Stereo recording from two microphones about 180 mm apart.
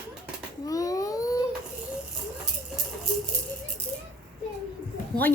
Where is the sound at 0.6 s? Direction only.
20° left (ahead or behind).